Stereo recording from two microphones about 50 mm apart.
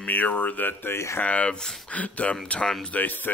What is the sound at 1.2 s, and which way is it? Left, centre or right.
Speech, left.